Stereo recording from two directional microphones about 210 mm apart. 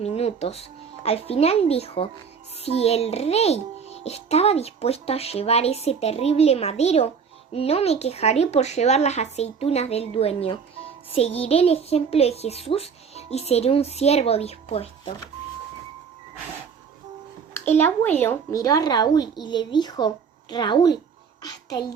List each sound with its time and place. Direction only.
0.0 s a child's voice: 30° left (ahead or behind)
17.7 s a child's voice: 10° left (ahead or behind)